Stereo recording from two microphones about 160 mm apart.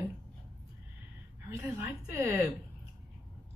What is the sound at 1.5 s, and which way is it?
A woman's voice, 15° right (ahead or behind).